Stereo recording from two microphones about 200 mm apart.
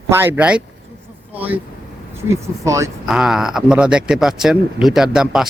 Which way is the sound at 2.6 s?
15° right (ahead or behind).